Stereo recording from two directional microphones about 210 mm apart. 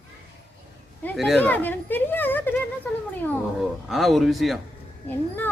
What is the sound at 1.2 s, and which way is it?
Speech, centre (ahead or behind).